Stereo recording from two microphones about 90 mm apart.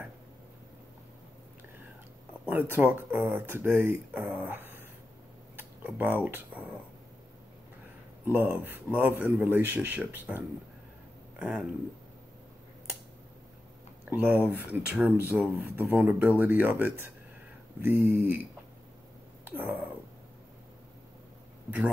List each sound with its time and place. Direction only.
2.4 s speech: 20° right (ahead or behind)
4.5 s dog: 25° right (ahead or behind)
5.6 s speech: 20° right (ahead or behind)
8.3 s speech: 25° right (ahead or behind)
11.3 s speech: 5° right (ahead or behind)
14.0 s speech: 15° right (ahead or behind)
19.4 s cat: 20° right (ahead or behind)
21.6 s speech: 15° right (ahead or behind)